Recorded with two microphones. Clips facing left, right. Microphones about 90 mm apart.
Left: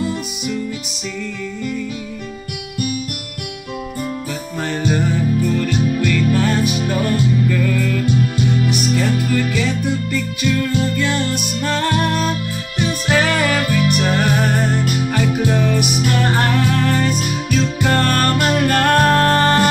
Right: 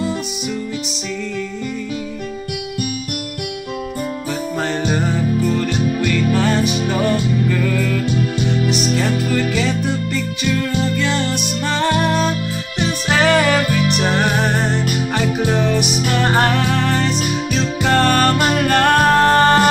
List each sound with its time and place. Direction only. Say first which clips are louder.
4.6 s music: left 2 dB; 25° right (ahead or behind)